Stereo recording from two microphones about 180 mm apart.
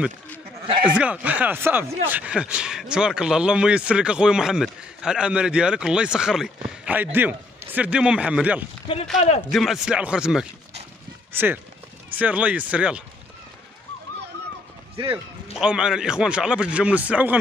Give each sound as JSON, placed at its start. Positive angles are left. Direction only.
{"t": 0.8, "sound": "a man's voice", "side_deg": -5}
{"t": 9.2, "sound": "a man's voice", "side_deg": 35}
{"t": 9.5, "sound": "a man's voice", "side_deg": 0}
{"t": 15.5, "sound": "a man's voice", "side_deg": -5}